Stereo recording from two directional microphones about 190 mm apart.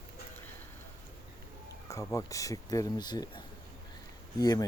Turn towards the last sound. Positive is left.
turn(degrees=20)  # may be behind; listen again after turning